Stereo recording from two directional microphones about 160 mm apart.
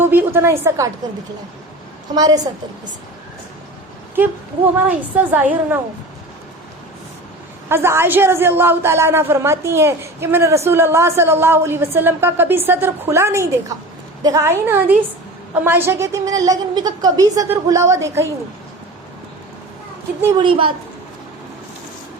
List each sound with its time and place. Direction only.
0.0 s a woman's voice: 15° right (ahead or behind)
2.1 s a woman's voice: 25° right (ahead or behind)
4.1 s a woman's voice: 10° right (ahead or behind)
7.7 s a woman's voice: 15° right (ahead or behind)
20.4 s a woman's voice: 35° right (ahead or behind)